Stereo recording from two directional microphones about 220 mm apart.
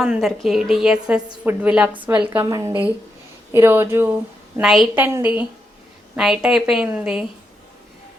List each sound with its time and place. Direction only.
0.0 s a woman's voice: centre (ahead or behind)